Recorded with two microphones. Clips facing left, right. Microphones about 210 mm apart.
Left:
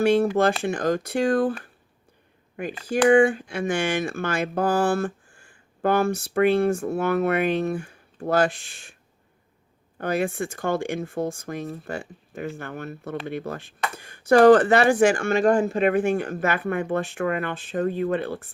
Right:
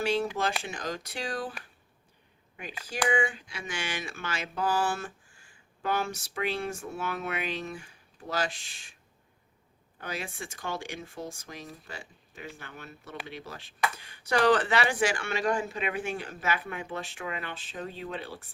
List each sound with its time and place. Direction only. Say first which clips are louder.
0.0 s speech: left 10 dB; 55° left (ahead or behind)
10.0 s speech: left 13 dB; 55° left (ahead or behind)